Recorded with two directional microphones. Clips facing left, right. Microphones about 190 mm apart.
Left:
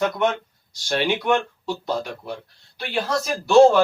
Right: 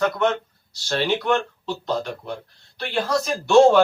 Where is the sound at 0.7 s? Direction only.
10° left (ahead or behind).